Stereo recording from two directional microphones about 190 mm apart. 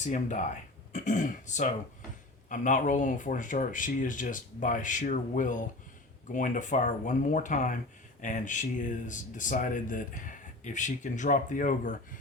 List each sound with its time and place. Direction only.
0.0 s speech: 40° left (ahead or behind)